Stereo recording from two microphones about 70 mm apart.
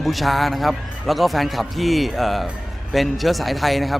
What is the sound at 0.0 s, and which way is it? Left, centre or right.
A man's voice, centre.